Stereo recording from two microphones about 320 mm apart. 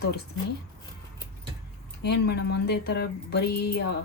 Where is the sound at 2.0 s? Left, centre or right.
Left.